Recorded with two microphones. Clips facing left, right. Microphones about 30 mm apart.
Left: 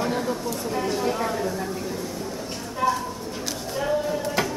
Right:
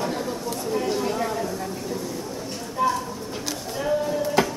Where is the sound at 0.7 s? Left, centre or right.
Centre.